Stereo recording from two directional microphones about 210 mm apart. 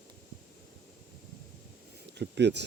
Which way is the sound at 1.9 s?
55° right (ahead or behind).